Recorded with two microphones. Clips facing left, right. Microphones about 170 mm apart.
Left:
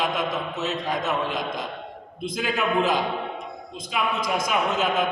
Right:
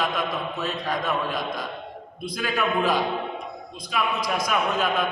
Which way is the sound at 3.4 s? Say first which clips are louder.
Even; 25° left (ahead or behind).